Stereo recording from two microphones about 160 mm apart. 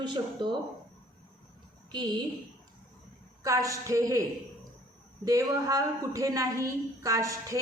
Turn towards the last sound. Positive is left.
turn(degrees=-20)  # may be behind; listen again after turning